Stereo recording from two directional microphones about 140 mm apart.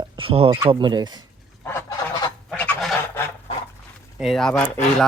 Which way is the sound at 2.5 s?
5° left (ahead or behind).